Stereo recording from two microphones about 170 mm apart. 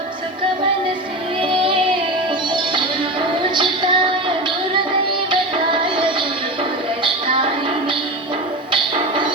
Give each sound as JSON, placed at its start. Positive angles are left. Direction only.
{"t": 1.4, "sound": "child singing", "side_deg": -30}
{"t": 2.5, "sound": "music", "side_deg": -30}
{"t": 5.8, "sound": "music", "side_deg": -30}